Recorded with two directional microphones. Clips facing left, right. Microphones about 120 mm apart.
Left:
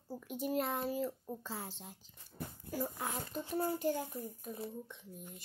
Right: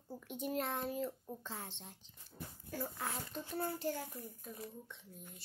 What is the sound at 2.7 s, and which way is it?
A child's voice, 15° left (ahead or behind).